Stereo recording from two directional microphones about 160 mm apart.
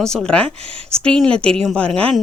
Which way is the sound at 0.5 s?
40° right (ahead or behind).